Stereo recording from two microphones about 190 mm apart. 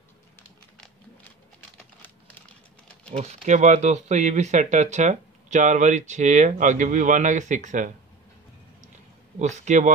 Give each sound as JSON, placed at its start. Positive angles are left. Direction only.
{"t": 1.8, "sound": "typing", "side_deg": 10}
{"t": 3.1, "sound": "speech", "side_deg": -35}
{"t": 9.4, "sound": "speech", "side_deg": -40}